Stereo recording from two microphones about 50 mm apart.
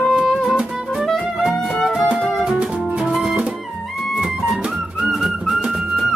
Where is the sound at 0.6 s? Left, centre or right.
Centre.